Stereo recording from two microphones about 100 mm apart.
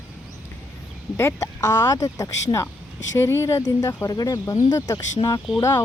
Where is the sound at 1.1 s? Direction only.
25° left (ahead or behind).